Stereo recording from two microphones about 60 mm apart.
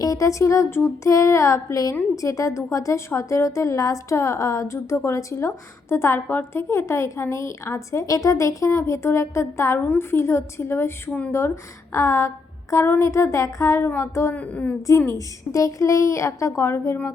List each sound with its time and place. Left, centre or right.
0.0 s a woman's voice: left
6.1 s a woman's voice: left
6.6 s a woman's voice: left
8.9 s a woman's voice: left
9.7 s speech: left
10.0 s a woman's voice: left
14.3 s speech: left
14.8 s a woman's voice: left